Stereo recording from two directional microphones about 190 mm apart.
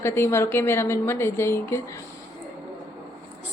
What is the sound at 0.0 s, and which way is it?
A woman's voice, 15° left (ahead or behind).